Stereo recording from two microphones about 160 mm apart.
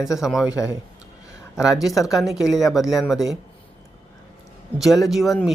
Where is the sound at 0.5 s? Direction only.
20° left (ahead or behind).